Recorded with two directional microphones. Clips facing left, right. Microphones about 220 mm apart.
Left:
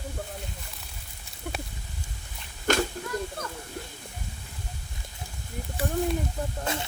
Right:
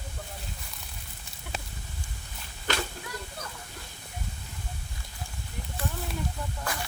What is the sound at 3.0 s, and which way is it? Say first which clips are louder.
Children playing: left 6 dB; 40° left (ahead or behind).